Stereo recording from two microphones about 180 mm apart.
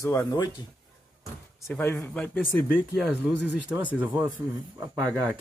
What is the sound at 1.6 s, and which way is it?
Speech, 15° left (ahead or behind).